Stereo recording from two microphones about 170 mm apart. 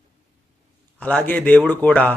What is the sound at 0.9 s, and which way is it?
A man's voice, 10° left (ahead or behind).